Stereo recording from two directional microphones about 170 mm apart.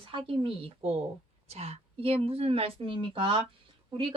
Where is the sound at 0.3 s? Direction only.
35° right (ahead or behind).